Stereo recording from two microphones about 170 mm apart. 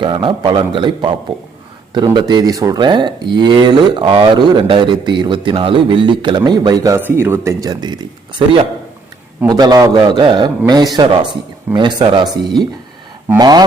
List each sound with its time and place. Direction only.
0.0 s speech: 30° right (ahead or behind)
2.1 s speech: 25° right (ahead or behind)
6.9 s speech: 15° right (ahead or behind)
9.5 s speech: 25° right (ahead or behind)